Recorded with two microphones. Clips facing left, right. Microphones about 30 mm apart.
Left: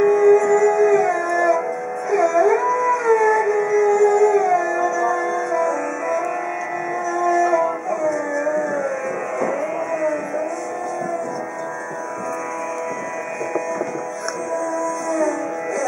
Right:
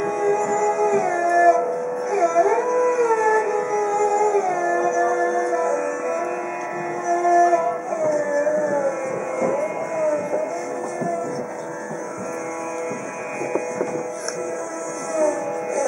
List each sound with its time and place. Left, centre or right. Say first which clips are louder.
0.0 s music: left 7 dB; centre
15.1 s music: right 4 dB; centre